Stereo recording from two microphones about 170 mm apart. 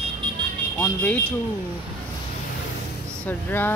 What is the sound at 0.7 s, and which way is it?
Speech, 10° left (ahead or behind).